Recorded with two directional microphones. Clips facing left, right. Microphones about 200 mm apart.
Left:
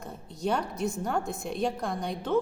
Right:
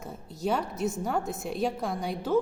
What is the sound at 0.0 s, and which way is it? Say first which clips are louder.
A woman's voice: even; 5° right (ahead or behind).